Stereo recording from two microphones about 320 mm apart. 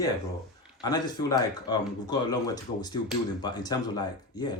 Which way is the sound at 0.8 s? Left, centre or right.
Centre.